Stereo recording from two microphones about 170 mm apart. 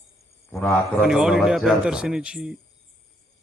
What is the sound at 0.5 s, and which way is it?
Speech, 10° left (ahead or behind).